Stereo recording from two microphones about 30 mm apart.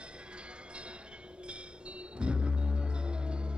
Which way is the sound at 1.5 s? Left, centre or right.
Right.